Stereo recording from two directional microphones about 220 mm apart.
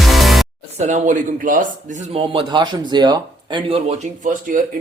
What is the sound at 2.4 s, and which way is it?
Speech, 20° right (ahead or behind).